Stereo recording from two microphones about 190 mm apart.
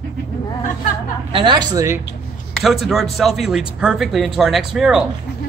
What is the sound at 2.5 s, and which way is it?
Speech, centre (ahead or behind).